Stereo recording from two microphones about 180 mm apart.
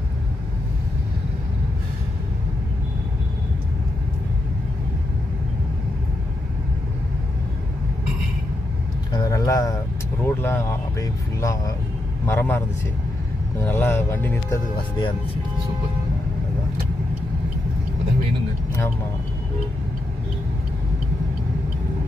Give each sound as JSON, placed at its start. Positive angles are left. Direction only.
{"t": 9.1, "sound": "vehicle", "side_deg": 20}
{"t": 10.2, "sound": "speech", "side_deg": 15}
{"t": 14.8, "sound": "speech", "side_deg": 25}